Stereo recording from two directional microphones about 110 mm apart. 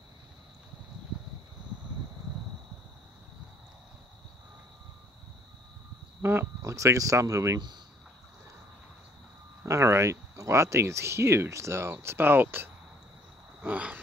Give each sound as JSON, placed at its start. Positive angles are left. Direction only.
{"t": 6.2, "sound": "speech", "side_deg": -20}
{"t": 9.7, "sound": "speech", "side_deg": -25}
{"t": 13.6, "sound": "a sound", "side_deg": -15}